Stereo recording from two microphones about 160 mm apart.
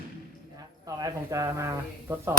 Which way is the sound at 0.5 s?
25° right (ahead or behind).